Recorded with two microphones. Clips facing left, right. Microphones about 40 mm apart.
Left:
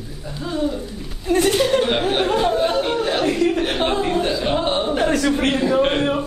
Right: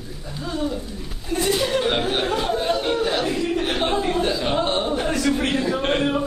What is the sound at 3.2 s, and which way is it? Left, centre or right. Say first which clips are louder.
Speech: left 5 dB; left.